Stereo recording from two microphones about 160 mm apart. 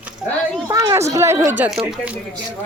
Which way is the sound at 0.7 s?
20° right (ahead or behind).